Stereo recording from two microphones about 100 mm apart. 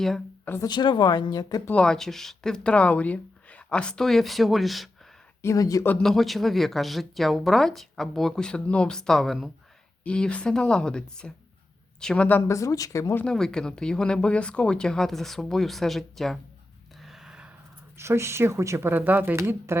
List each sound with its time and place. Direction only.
0.6 s speech: 45° left (ahead or behind)
1.7 s speech: 10° left (ahead or behind)
5.4 s speech: 30° left (ahead or behind)
6.0 s a woman's voice: centre (ahead or behind)
12.5 s speech: 35° left (ahead or behind)
13.2 s speech: 5° left (ahead or behind)
17.0 s a sound: 5° right (ahead or behind)
17.9 s speech: 25° right (ahead or behind)